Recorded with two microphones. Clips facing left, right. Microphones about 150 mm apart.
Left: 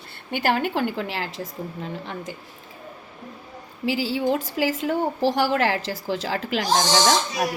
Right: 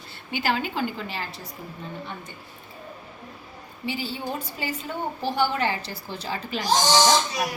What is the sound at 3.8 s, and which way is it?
A woman's voice, 90° left.